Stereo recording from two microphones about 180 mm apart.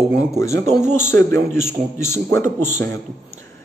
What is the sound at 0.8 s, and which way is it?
A man's voice, 10° left (ahead or behind).